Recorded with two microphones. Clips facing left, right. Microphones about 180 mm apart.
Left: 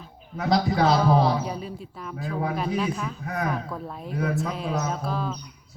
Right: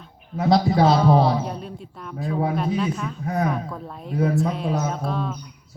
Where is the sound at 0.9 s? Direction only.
Centre (ahead or behind).